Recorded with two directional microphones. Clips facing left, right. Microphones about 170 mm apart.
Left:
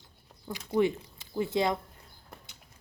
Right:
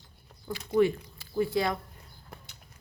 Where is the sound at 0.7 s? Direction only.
20° left (ahead or behind).